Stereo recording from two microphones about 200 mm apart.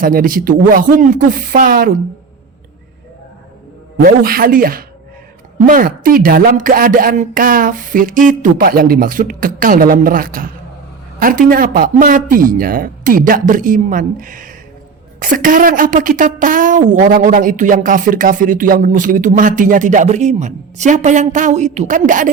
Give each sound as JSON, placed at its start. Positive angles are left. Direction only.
{"t": 0.0, "sound": "a woman's voice", "side_deg": -45}
{"t": 4.0, "sound": "a woman's voice", "side_deg": -50}